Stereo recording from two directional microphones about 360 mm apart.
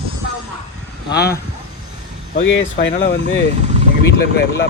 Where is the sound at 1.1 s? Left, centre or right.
Left.